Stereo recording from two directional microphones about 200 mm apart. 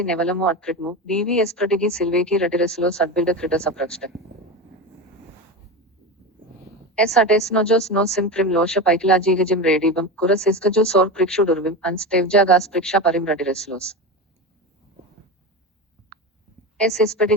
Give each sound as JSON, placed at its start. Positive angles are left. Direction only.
{"t": 0.0, "sound": "a woman's voice", "side_deg": 5}
{"t": 6.9, "sound": "a woman's voice", "side_deg": 5}
{"t": 16.1, "sound": "a sound", "side_deg": -50}
{"t": 16.7, "sound": "a woman's voice", "side_deg": 5}